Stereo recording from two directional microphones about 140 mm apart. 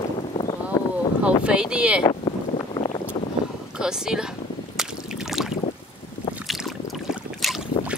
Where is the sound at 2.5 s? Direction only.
35° left (ahead or behind).